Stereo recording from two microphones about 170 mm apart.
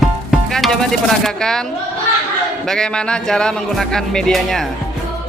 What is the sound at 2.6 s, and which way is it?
Music, 5° left (ahead or behind).